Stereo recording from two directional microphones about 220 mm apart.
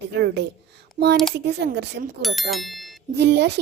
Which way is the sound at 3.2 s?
50° right (ahead or behind).